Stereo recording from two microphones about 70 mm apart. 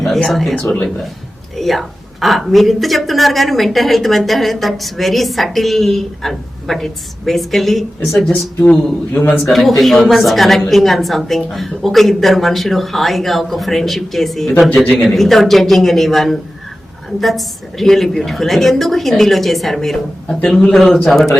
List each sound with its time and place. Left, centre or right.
0.0 s a woman's voice: centre
8.2 s speech: centre
9.4 s a woman's voice: centre